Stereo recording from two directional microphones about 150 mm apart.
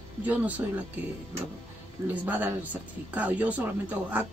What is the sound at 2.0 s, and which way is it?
Speech, 15° right (ahead or behind).